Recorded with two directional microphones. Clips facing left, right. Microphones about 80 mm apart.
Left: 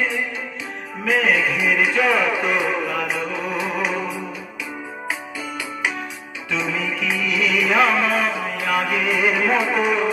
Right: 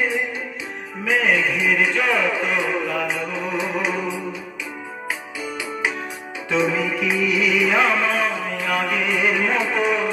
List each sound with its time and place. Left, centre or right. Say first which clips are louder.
1.0 s music: left 1 dB; centre
6.5 s music: right 4 dB; right
7.2 s music: even; centre